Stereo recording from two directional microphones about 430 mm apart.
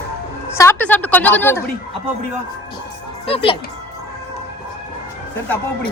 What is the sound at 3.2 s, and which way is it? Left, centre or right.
Speech, centre.